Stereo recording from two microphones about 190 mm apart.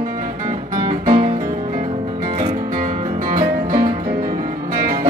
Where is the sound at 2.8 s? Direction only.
45° right (ahead or behind).